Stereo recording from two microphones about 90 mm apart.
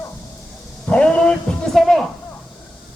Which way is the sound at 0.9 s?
10° left (ahead or behind).